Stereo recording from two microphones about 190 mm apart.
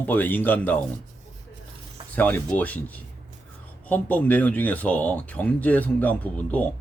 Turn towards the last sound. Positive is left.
turn(degrees=5)  # may be behind; listen again after turning